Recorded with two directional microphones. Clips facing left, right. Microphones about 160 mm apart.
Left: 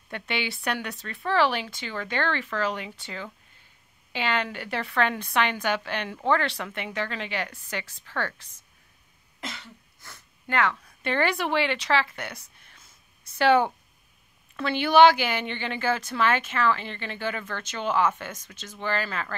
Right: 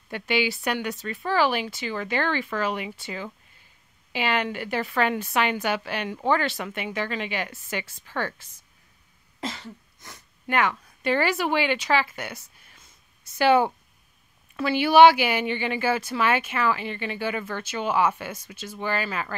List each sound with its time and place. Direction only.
0.1 s speech: 5° right (ahead or behind)
9.4 s cough: 30° right (ahead or behind)
9.9 s sniff: 20° right (ahead or behind)
10.4 s speech: 10° right (ahead or behind)
13.4 s speech: 5° right (ahead or behind)